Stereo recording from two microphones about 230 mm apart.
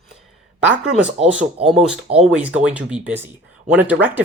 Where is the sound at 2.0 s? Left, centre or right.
Right.